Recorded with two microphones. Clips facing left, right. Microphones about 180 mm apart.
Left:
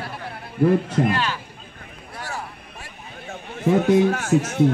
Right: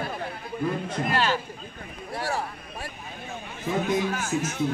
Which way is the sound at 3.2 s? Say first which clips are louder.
Left 10 dB; 65° left (ahead or behind).